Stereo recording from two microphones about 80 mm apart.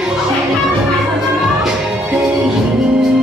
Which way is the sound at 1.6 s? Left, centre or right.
Centre.